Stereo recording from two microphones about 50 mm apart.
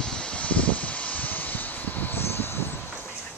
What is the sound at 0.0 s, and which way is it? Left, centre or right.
Vehicle, centre.